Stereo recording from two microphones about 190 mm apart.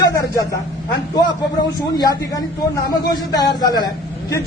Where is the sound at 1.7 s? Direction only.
20° left (ahead or behind).